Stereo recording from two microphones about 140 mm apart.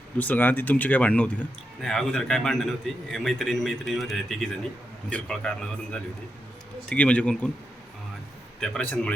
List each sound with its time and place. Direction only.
0.2 s a man's voice: 15° left (ahead or behind)
8.6 s a man's voice: 5° left (ahead or behind)